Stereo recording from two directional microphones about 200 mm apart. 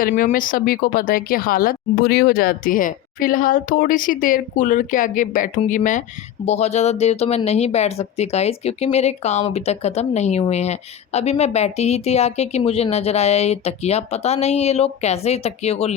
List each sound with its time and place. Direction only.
0.0 s speech: 40° left (ahead or behind)